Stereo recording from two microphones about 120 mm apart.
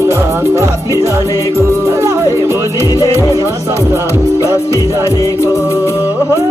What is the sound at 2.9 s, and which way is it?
Music, 25° left (ahead or behind).